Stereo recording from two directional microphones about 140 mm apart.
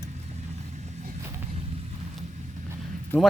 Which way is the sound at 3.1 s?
10° left (ahead or behind).